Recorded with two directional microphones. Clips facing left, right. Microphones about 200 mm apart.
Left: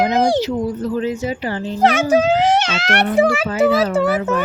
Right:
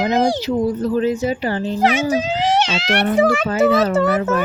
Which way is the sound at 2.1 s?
55° left (ahead or behind).